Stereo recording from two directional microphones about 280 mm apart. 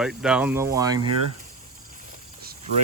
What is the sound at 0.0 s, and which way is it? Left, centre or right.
Speech, centre.